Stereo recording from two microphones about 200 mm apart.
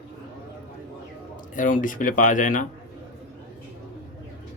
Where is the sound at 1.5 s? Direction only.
40° left (ahead or behind).